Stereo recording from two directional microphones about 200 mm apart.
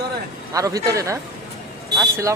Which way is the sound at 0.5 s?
15° right (ahead or behind).